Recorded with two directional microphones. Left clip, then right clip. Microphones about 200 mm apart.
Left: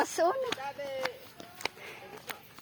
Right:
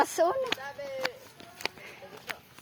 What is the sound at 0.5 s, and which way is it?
Speech, 45° right (ahead or behind).